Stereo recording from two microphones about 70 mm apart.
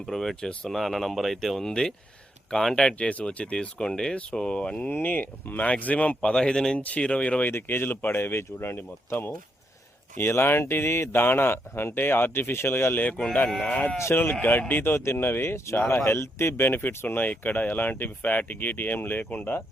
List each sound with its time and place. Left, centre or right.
0.0 s speech: centre
4.9 s speech: left
7.4 s speech: left
13.1 s speech: centre
13.7 s speech: left
14.0 s speech: left